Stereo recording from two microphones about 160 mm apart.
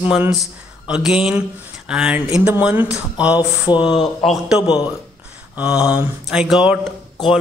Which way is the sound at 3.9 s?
30° left (ahead or behind).